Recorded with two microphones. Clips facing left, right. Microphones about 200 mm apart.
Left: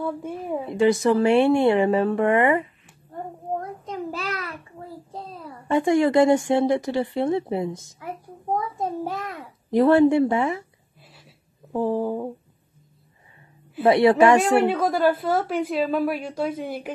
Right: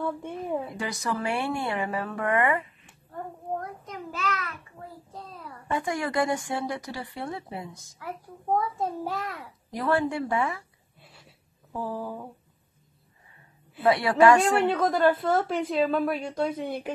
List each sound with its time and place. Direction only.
0.0 s a woman's voice: 5° left (ahead or behind)
0.7 s a child's voice: 25° left (ahead or behind)
3.5 s child singing: 30° left (ahead or behind)
5.1 s a child's voice: 30° left (ahead or behind)
11.7 s a child's voice: 25° left (ahead or behind)
13.8 s a child's voice: 25° left (ahead or behind)
14.6 s a woman's voice: 10° left (ahead or behind)